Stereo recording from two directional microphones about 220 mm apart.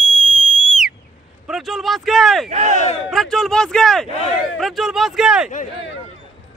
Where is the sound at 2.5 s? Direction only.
30° right (ahead or behind).